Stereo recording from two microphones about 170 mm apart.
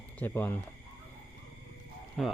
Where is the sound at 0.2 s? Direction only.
15° left (ahead or behind).